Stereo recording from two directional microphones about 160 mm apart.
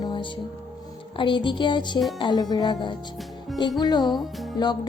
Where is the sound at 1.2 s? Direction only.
30° left (ahead or behind).